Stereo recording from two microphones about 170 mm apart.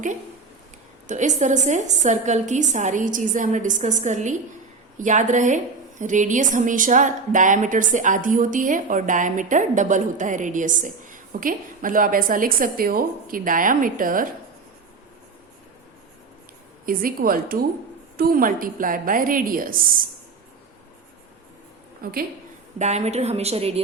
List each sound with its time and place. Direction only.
1.0 s a woman's voice: 45° right (ahead or behind)
16.8 s a woman's voice: 55° right (ahead or behind)
22.0 s a woman's voice: 60° right (ahead or behind)
22.8 s a woman's voice: 40° right (ahead or behind)